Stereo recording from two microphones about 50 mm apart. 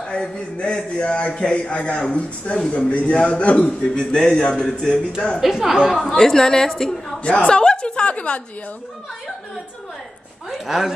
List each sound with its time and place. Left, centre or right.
0.1 s a man's voice: centre
5.4 s a woman's voice: centre
6.0 s a man's voice: centre
7.2 s chuckle: centre
10.5 s a woman's voice: centre